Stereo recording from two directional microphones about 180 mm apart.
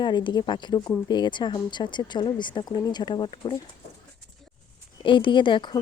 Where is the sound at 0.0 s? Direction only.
25° left (ahead or behind).